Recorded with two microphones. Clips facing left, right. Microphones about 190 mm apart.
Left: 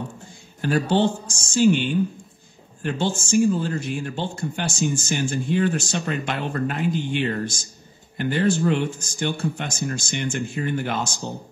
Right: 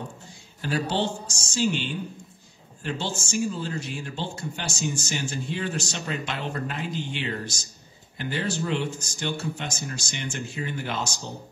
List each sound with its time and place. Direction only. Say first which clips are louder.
0.6 s speech: left 6 dB; 55° left (ahead or behind)